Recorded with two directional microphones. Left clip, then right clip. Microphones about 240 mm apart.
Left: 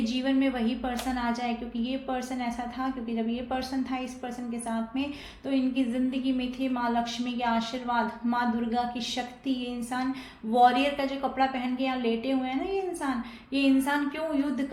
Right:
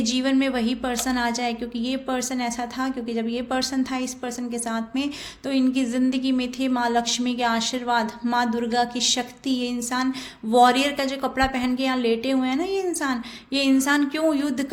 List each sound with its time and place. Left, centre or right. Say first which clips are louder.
0.0 s a woman's voice: right 5 dB; right